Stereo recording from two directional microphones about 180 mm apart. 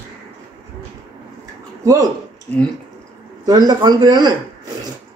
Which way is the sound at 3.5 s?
20° right (ahead or behind).